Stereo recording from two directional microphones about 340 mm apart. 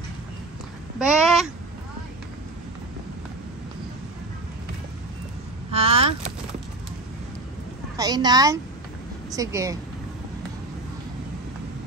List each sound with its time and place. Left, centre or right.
0.9 s a child's voice: centre
5.7 s vehicle: centre
8.0 s speech: centre